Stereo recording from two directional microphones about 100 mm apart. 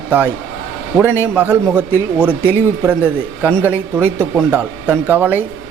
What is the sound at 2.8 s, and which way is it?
A man's voice, 15° right (ahead or behind).